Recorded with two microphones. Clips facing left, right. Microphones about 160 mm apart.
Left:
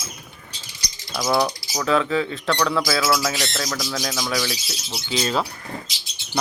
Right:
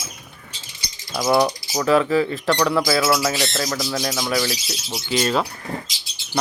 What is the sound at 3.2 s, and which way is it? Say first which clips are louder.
Speech: right 3 dB; 5° right (ahead or behind).